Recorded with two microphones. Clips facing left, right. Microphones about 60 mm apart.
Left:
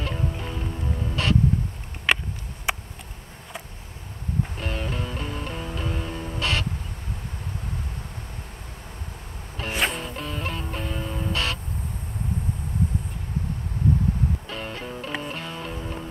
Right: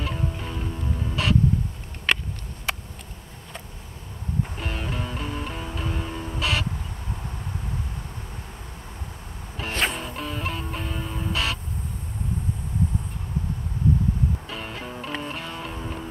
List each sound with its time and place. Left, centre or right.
0.0 s music: centre
2.1 s a sound: centre
4.6 s music: centre
9.6 s music: centre
14.5 s music: centre